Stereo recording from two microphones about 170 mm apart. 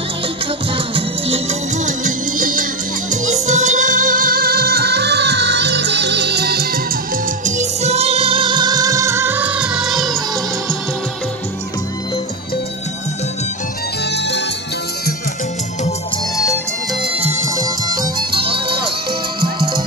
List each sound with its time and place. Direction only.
0.9 s music: 35° right (ahead or behind); by 6.8 s 70° right (ahead or behind)
7.4 s music: 45° right (ahead or behind); by 10.1 s centre (ahead or behind)
19.4 s music: 60° right (ahead or behind)